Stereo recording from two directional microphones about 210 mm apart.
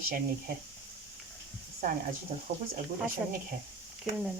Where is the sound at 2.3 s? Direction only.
30° right (ahead or behind).